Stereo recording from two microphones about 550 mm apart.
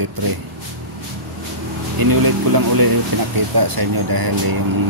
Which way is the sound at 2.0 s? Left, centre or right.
Right.